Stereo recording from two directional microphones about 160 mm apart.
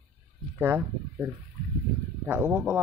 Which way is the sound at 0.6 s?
15° right (ahead or behind).